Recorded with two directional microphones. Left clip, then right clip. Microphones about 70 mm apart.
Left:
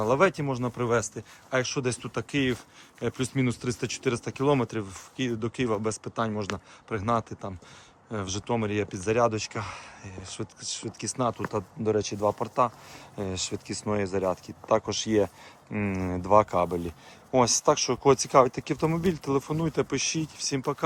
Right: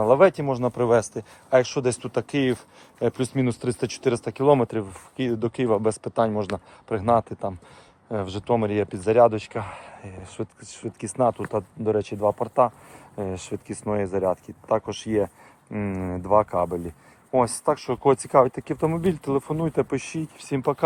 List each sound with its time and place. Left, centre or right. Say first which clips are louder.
0.2 s speech: right 6 dB; centre
0.6 s speech: right 7 dB; right
3.2 s speech: right 4 dB; centre; by 7.5 s right
8.2 s speech: right 5 dB; centre
8.5 s speech: right 6 dB; right
9.0 s speech: right 8 dB; centre
10.3 s speech: even; centre
11.2 s speech: right 7 dB; centre
11.4 s speech: right 3 dB; centre
12.4 s speech: right 5 dB; centre
14.7 s speech: right 1 dB; left
15.7 s speech: right 1 dB; centre; by 18.0 s left
18.0 s speech: right 3 dB; centre
19.9 s speech: even; centre